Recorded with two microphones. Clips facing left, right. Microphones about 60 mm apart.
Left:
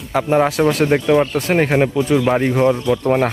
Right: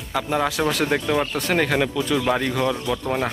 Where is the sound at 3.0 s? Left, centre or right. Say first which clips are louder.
Left 9 dB; left.